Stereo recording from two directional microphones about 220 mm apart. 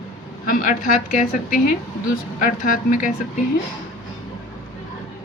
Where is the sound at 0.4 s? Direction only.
40° left (ahead or behind).